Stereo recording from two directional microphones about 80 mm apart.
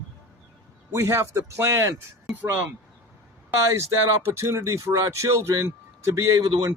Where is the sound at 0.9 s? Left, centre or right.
Right.